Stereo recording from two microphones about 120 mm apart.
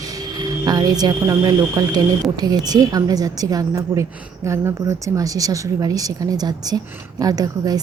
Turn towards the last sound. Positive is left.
turn(degrees=-30)  # may be behind; listen again after turning